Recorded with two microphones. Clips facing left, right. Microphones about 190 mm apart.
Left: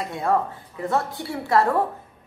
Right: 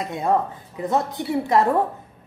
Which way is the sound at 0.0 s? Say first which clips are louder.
Right 1 dB; 20° right (ahead or behind).